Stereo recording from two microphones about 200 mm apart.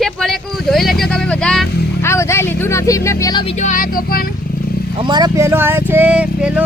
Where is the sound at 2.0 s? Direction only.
15° left (ahead or behind); by 4.3 s 45° left (ahead or behind).